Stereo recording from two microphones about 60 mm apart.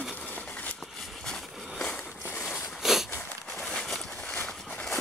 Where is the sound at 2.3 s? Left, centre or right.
Left.